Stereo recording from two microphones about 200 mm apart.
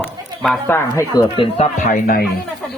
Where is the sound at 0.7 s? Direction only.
15° left (ahead or behind).